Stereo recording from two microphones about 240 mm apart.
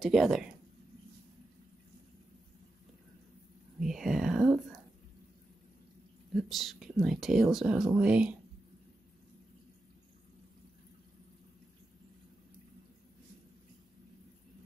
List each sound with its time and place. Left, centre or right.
0.0 s speech: centre
3.8 s whispering: centre
6.3 s speech: centre